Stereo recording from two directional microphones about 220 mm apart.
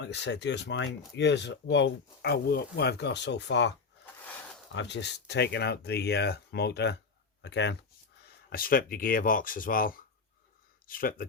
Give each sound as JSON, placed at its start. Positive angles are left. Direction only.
{"t": 0.0, "sound": "speech", "side_deg": 50}
{"t": 4.7, "sound": "speech", "side_deg": 55}
{"t": 8.4, "sound": "speech", "side_deg": 40}